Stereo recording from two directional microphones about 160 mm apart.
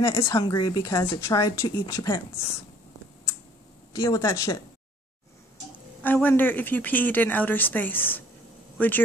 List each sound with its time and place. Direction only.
0.0 s a woman's voice: 20° left (ahead or behind)
3.9 s a woman's voice: 20° left (ahead or behind)
6.0 s speech: 10° left (ahead or behind)